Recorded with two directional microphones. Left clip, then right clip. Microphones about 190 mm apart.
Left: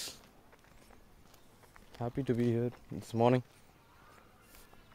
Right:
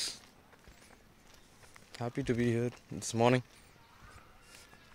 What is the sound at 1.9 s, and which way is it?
Speech, 10° left (ahead or behind).